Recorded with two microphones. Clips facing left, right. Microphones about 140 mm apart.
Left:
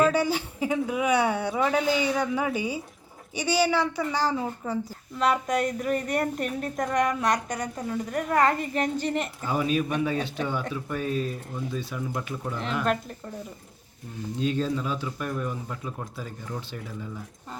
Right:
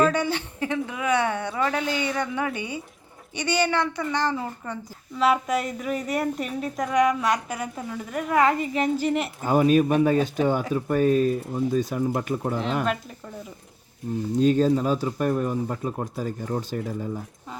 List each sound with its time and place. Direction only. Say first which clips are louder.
0.0 s a woman's voice: even; 10° left (ahead or behind)
5.2 s a woman's voice: right 2 dB; 5° right (ahead or behind)
9.4 s speech: right 9 dB; 45° right (ahead or behind)
14.3 s speech: right 7 dB; 45° right (ahead or behind)